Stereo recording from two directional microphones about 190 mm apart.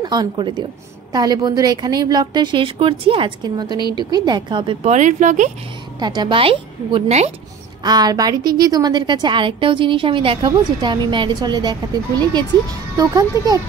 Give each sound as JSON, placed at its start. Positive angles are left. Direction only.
{"t": 0.0, "sound": "a woman's voice", "side_deg": -25}
{"t": 4.8, "sound": "speech", "side_deg": -40}
{"t": 5.9, "sound": "a woman's voice", "side_deg": -20}